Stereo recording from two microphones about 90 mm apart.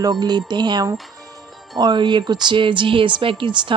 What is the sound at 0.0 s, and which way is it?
A woman's voice, 50° right (ahead or behind).